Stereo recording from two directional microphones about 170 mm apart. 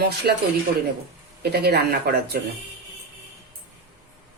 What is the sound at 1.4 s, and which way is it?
A woman's voice, 70° right (ahead or behind).